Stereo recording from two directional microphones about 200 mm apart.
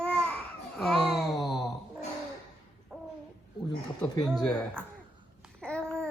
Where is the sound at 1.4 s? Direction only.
20° left (ahead or behind).